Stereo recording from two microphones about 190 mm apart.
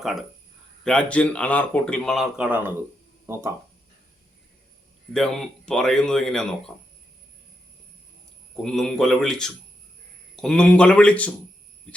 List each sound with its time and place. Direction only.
0.0 s speech: centre (ahead or behind)
5.1 s speech: centre (ahead or behind)
8.6 s speech: centre (ahead or behind)